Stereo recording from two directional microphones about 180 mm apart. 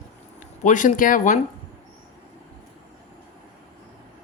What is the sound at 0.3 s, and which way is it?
Speech, 45° left (ahead or behind).